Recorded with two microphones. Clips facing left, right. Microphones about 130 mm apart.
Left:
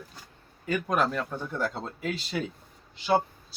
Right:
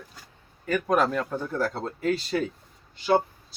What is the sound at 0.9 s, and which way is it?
Speech, centre (ahead or behind).